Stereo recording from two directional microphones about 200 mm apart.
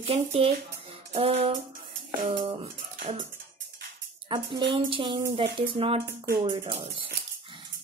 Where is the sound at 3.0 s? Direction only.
30° right (ahead or behind).